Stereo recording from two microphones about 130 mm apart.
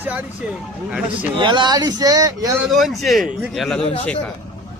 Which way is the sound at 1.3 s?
35° right (ahead or behind).